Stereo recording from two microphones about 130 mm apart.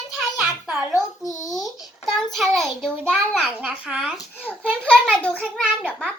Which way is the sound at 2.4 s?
Centre (ahead or behind).